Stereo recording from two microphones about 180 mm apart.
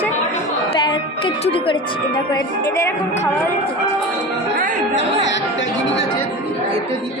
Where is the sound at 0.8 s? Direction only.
25° left (ahead or behind).